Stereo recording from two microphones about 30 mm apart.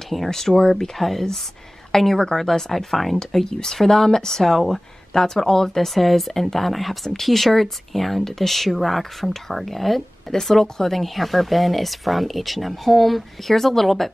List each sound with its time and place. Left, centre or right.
0.1 s speech: centre
0.7 s a woman's voice: centre
3.2 s speech: centre
5.9 s speech: centre